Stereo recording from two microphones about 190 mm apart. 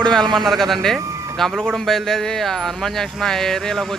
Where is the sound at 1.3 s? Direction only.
Centre (ahead or behind).